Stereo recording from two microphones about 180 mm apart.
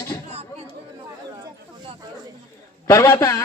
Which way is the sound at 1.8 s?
25° right (ahead or behind).